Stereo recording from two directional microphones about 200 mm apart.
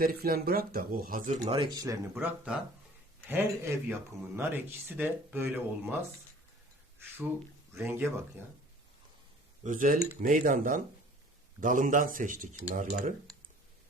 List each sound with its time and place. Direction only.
0.0 s speech: 50° right (ahead or behind); by 2.0 s 20° right (ahead or behind)
2.1 s speech: 5° right (ahead or behind)
7.8 s speech: 10° right (ahead or behind)
9.6 s speech: 45° right (ahead or behind)